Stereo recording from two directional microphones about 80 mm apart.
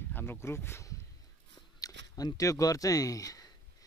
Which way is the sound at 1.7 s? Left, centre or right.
Left.